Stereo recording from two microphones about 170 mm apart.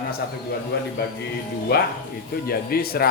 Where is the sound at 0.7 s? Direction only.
70° left (ahead or behind).